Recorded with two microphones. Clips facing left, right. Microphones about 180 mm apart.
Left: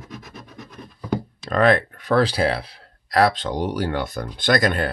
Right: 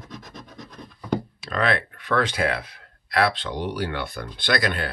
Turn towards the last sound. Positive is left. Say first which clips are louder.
# left 5 dB
turn(degrees=45)  # may be behind; listen again after turning